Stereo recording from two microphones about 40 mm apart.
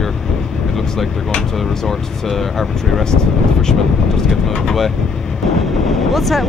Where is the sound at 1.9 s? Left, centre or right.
Centre.